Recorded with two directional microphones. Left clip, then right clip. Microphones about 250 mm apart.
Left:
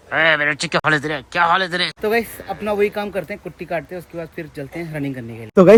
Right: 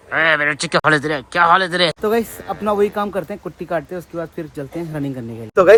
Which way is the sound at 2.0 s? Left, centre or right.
Centre.